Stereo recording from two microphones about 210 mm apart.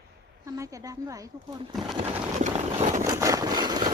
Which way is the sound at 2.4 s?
35° right (ahead or behind).